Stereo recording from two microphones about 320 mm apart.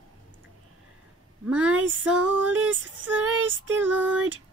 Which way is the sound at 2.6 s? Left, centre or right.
Centre.